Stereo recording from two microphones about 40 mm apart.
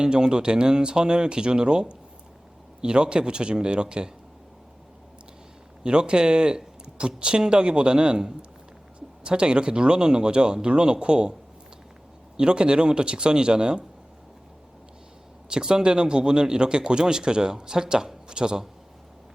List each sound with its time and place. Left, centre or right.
0.0 s a man's voice: centre
5.8 s a man's voice: right
12.4 s a man's voice: right
15.4 s a man's voice: centre